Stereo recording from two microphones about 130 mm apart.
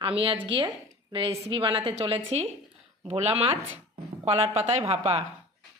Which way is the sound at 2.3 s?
55° right (ahead or behind).